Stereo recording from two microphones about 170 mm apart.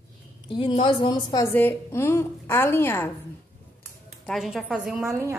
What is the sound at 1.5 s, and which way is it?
A woman's voice, 15° left (ahead or behind).